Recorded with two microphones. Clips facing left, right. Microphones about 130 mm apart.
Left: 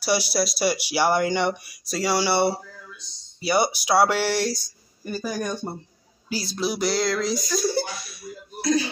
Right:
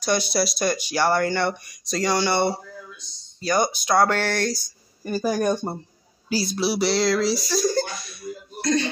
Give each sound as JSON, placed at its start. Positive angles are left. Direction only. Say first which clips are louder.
{"t": 0.0, "sound": "speech", "louder": "right 1 dB", "side_deg": 10}
{"t": 5.0, "sound": "speech", "louder": "right 6 dB", "side_deg": -45}
{"t": 6.5, "sound": "a sound", "louder": "right 1 dB", "side_deg": -5}
{"t": 7.7, "sound": "speech", "louder": "right 2 dB", "side_deg": 5}